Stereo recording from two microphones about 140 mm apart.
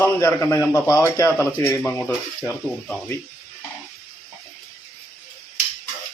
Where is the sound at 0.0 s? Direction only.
15° left (ahead or behind).